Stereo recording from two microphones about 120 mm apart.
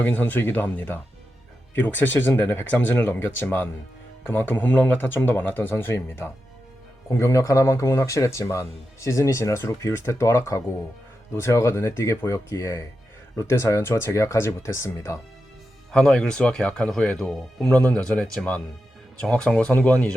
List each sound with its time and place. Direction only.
0.0 s speech: 15° left (ahead or behind)
15.9 s speech: 5° left (ahead or behind)